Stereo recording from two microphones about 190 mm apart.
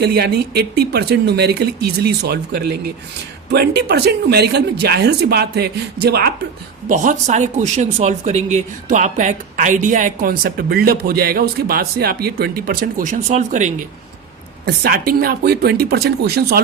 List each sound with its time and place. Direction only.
0.0 s speech: 60° right (ahead or behind)
6.8 s speech: 40° right (ahead or behind)
14.6 s speech: 50° right (ahead or behind)